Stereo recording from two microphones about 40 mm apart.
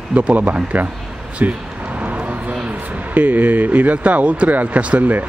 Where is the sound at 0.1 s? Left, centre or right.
Right.